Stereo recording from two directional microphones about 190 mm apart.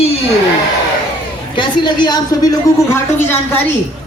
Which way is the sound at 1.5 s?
25° left (ahead or behind).